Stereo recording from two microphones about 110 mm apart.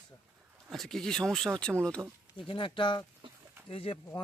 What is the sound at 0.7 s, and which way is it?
Speech, 5° left (ahead or behind).